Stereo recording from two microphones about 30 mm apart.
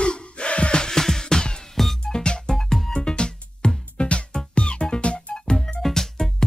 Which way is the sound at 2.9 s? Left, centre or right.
Left.